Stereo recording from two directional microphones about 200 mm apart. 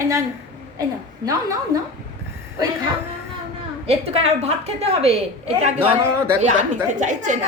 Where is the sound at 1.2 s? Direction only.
15° right (ahead or behind).